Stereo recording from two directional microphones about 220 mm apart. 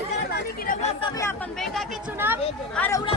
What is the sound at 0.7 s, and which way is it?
Chatter, 30° left (ahead or behind).